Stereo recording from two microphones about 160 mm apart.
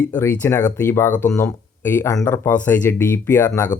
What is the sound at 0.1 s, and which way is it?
Speech, 15° left (ahead or behind).